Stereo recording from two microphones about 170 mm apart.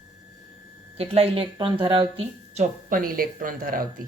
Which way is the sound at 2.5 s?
55° right (ahead or behind).